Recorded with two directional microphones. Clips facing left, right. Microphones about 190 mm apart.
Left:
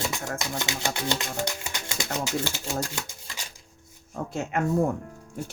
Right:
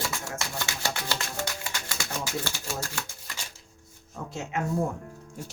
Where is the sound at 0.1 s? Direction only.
15° left (ahead or behind).